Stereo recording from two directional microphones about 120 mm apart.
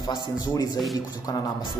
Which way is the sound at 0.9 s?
30° left (ahead or behind).